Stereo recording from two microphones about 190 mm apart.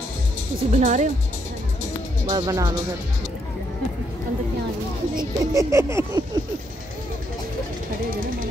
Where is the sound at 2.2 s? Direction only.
20° right (ahead or behind).